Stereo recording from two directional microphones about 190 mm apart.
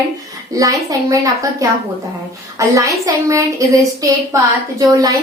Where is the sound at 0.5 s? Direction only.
20° right (ahead or behind).